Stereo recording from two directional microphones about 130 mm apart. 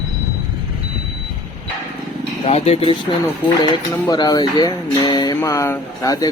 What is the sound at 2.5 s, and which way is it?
Speech, 55° left (ahead or behind).